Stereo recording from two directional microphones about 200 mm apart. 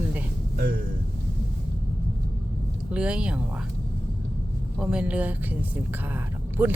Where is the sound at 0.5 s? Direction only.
50° right (ahead or behind).